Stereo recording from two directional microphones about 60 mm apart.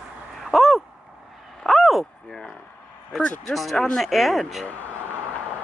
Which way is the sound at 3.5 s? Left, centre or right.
Centre.